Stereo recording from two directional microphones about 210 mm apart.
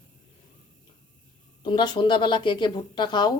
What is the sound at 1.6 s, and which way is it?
A woman's voice, 20° left (ahead or behind).